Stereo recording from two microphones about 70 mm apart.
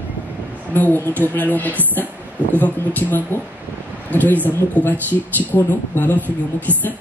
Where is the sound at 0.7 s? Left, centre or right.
Left.